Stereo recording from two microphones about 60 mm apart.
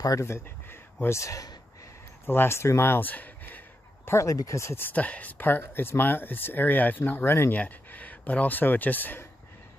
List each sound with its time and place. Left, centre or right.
0.2 s speech: left
2.2 s a sound: left
4.2 s speech: left
4.9 s speech: left